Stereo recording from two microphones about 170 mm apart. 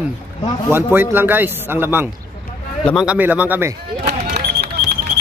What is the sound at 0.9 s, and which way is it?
Speech, 10° right (ahead or behind).